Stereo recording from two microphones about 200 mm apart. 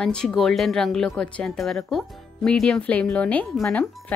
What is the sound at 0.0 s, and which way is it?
Speech, 5° left (ahead or behind).